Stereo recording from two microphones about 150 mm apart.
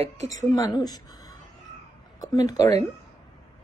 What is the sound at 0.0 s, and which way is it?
Speech, 50° right (ahead or behind).